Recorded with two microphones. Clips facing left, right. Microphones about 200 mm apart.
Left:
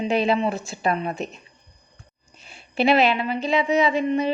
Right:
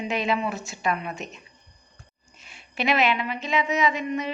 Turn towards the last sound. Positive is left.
turn(degrees=30)  # may be behind; listen again after turning